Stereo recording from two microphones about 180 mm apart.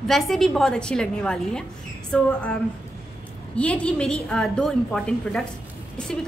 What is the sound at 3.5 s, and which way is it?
A woman's voice, 5° left (ahead or behind).